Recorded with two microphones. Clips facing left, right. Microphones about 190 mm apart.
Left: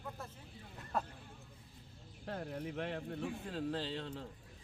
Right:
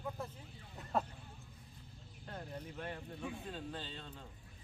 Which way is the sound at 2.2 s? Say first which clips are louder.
Left 5 dB; 75° left (ahead or behind).